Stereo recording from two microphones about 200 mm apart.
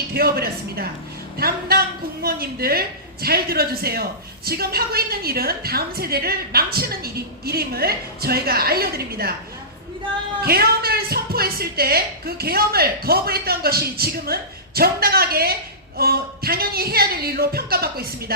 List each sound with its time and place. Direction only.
0.1 s a woman's voice: 50° right (ahead or behind)
10.4 s a woman's voice: 50° right (ahead or behind)